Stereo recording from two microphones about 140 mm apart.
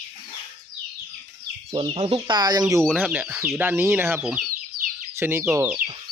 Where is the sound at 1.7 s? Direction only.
35° right (ahead or behind).